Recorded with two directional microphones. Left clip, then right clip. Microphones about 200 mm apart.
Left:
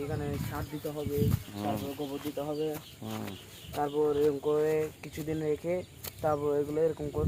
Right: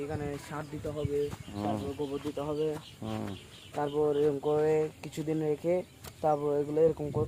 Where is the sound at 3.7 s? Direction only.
20° right (ahead or behind).